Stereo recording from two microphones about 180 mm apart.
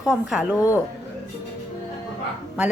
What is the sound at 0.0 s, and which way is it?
Speech, 5° right (ahead or behind).